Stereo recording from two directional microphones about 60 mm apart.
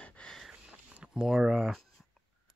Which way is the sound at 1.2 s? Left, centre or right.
Centre.